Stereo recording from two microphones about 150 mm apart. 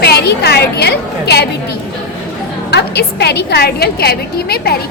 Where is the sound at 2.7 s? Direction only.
90° left.